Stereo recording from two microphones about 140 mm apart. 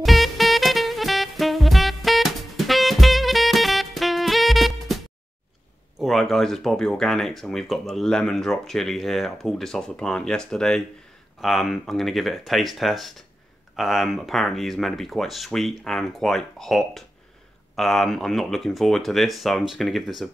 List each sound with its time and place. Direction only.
0.0 s music: centre (ahead or behind)
5.9 s speech: centre (ahead or behind)